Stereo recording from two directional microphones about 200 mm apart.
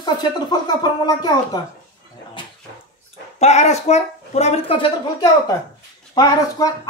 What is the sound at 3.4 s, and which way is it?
Speech, 30° left (ahead or behind).